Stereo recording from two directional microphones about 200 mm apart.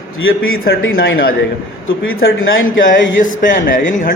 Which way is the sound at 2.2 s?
75° left (ahead or behind).